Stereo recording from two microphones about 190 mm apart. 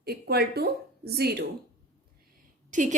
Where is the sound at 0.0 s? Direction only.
55° right (ahead or behind).